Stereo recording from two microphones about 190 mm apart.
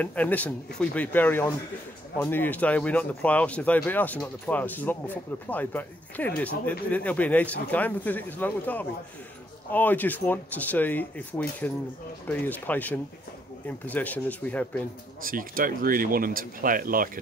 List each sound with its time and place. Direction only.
0.0 s speech: 10° left (ahead or behind)
15.2 s speech: 45° right (ahead or behind)